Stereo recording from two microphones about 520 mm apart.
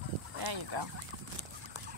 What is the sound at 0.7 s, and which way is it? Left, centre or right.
Fowl, right.